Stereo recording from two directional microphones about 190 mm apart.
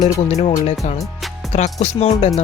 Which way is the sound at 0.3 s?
35° left (ahead or behind).